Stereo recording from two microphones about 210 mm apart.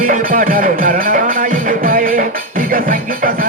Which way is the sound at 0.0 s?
40° right (ahead or behind).